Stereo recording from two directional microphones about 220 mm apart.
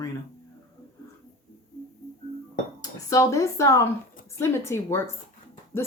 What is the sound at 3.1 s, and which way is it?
Speech, 15° left (ahead or behind).